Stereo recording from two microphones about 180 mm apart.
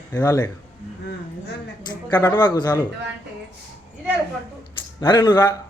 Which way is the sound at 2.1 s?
20° left (ahead or behind).